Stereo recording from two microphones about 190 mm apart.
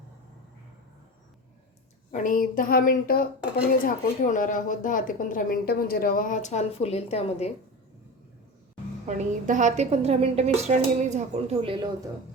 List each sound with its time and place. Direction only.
2.1 s speech: 45° left (ahead or behind)
9.0 s a woman's voice: 40° right (ahead or behind)